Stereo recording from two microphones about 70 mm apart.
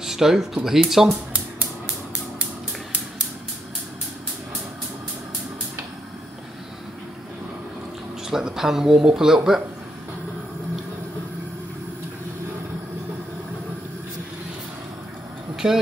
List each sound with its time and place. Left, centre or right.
0.0 s speech: centre
8.3 s speech: centre
15.5 s vehicle: centre